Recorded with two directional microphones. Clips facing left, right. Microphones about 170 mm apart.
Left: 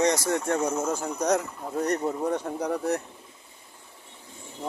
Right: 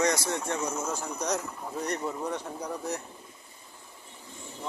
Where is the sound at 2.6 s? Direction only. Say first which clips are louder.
Left 7 dB; 60° left (ahead or behind).